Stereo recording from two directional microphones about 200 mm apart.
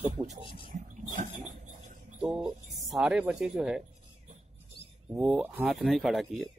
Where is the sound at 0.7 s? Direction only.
40° right (ahead or behind).